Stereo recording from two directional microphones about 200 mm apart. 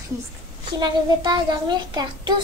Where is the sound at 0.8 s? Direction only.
20° right (ahead or behind).